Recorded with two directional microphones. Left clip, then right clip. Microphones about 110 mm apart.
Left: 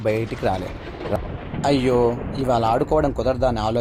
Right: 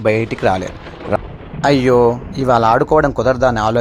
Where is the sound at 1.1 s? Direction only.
35° right (ahead or behind).